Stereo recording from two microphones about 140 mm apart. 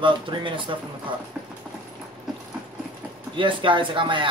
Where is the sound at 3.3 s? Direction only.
35° right (ahead or behind).